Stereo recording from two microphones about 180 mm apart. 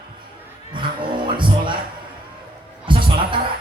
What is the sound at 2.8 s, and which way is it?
Music, 25° right (ahead or behind).